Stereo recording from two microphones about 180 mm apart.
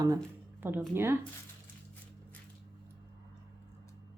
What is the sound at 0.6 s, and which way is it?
Speech, 10° right (ahead or behind).